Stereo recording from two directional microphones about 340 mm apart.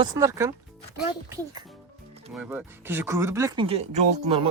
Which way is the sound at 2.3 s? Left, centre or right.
Centre.